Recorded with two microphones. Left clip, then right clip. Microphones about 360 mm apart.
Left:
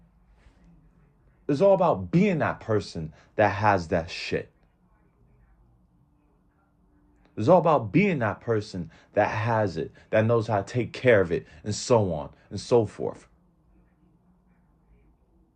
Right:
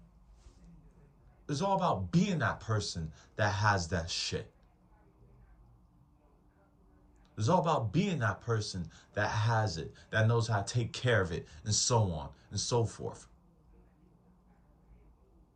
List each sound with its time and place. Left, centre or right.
1.5 s speech: centre
7.3 s speech: centre